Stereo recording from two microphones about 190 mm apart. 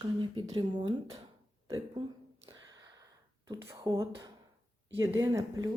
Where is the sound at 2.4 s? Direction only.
20° right (ahead or behind).